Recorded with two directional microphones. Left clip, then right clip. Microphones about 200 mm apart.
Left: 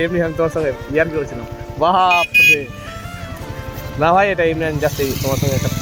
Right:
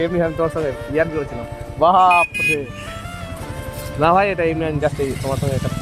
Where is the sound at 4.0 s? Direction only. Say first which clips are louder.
Left 2 dB; centre (ahead or behind).